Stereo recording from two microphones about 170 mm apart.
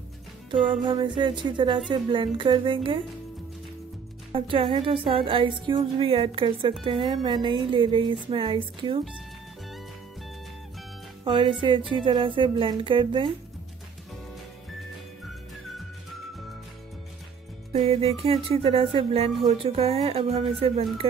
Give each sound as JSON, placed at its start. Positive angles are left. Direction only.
{"t": 0.8, "sound": "speech", "side_deg": -25}
{"t": 4.3, "sound": "a woman's voice", "side_deg": -30}
{"t": 11.2, "sound": "speech", "side_deg": -30}
{"t": 17.7, "sound": "a woman's voice", "side_deg": -35}